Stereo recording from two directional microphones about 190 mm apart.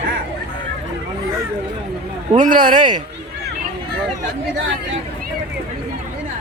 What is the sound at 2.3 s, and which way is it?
Speech, 45° right (ahead or behind).